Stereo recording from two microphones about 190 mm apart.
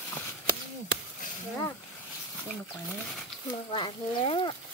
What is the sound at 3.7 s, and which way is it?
Speech, 25° left (ahead or behind).